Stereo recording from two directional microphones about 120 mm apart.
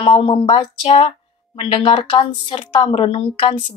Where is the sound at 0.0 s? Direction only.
45° left (ahead or behind).